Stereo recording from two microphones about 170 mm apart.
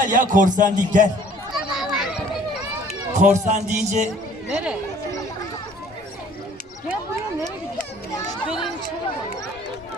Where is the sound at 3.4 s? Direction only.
45° right (ahead or behind).